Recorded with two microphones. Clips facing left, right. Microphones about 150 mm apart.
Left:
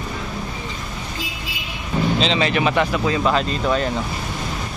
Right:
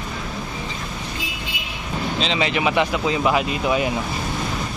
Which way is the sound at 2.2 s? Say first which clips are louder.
Even; 10° right (ahead or behind).